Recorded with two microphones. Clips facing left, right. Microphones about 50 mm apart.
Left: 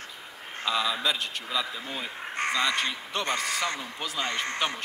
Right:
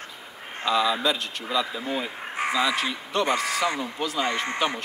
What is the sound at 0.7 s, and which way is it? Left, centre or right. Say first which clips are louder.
Speech: right 4 dB; centre.